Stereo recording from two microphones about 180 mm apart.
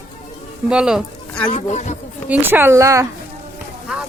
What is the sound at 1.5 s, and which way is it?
Speech, 40° left (ahead or behind).